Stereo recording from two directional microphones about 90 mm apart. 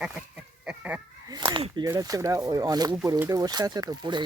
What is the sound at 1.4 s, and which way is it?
Speech, 60° right (ahead or behind).